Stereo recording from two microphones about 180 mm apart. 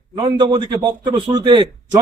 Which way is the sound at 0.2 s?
25° right (ahead or behind).